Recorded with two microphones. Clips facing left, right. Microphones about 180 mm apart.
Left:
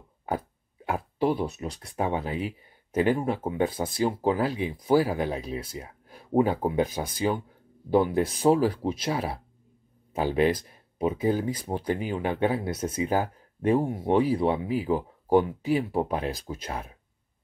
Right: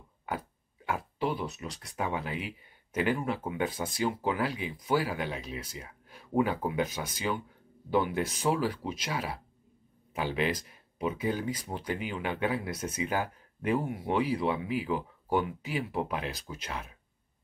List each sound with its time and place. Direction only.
0.8 s speech: 40° left (ahead or behind)
10.1 s speech: 45° left (ahead or behind)
12.6 s speech: 30° left (ahead or behind)